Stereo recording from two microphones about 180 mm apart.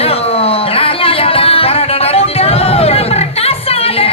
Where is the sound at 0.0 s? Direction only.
35° left (ahead or behind).